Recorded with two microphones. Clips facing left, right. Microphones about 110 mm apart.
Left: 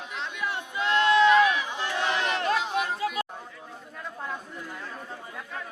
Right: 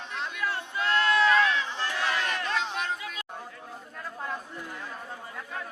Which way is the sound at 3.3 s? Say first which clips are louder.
Right 1 dB; centre (ahead or behind).